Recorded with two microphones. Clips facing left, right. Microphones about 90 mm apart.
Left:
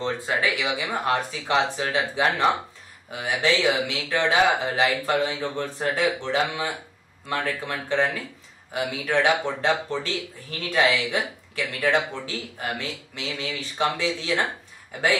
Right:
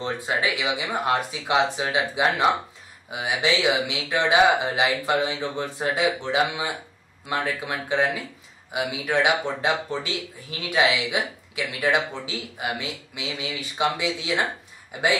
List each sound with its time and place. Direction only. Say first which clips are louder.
0.0 s speech: left 1 dB; 20° right (ahead or behind)